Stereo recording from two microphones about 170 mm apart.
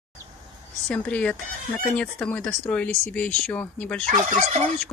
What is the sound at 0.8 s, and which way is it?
Speech, 5° left (ahead or behind).